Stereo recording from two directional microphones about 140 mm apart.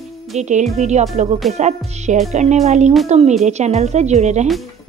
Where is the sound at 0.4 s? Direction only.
55° right (ahead or behind).